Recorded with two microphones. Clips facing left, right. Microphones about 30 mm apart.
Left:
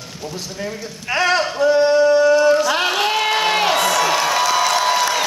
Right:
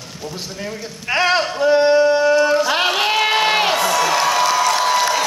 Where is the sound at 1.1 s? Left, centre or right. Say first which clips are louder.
Right 1 dB; centre.